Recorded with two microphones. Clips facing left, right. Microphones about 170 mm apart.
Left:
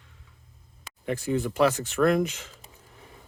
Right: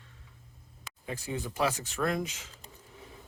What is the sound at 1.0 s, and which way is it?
Speech, 60° left (ahead or behind).